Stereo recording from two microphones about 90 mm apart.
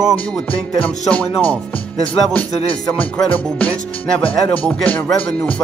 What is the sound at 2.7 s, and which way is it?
Speech, 10° left (ahead or behind).